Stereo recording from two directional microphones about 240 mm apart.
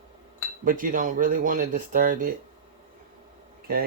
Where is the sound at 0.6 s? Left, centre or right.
Right.